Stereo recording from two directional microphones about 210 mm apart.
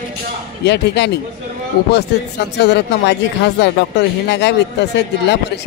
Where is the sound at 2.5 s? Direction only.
55° left (ahead or behind).